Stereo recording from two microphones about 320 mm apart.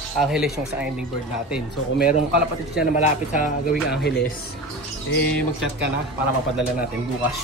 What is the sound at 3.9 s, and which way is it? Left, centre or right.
Speech, left.